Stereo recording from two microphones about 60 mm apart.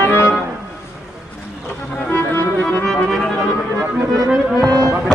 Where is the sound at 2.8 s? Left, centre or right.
Centre.